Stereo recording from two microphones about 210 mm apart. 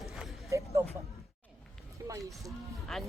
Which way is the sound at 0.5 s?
15° right (ahead or behind).